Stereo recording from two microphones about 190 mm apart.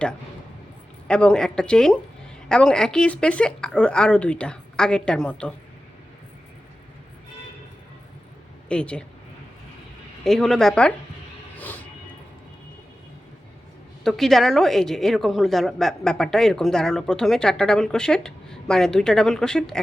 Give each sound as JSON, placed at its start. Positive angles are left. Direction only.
{"t": 1.0, "sound": "a woman's voice", "side_deg": 5}
{"t": 8.7, "sound": "a woman's voice", "side_deg": 5}
{"t": 10.2, "sound": "a woman's voice", "side_deg": 0}
{"t": 11.5, "sound": "music", "side_deg": 10}
{"t": 14.0, "sound": "a woman's voice", "side_deg": 0}